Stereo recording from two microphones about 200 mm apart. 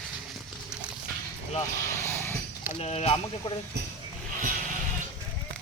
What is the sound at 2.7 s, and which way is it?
Speech, 30° left (ahead or behind).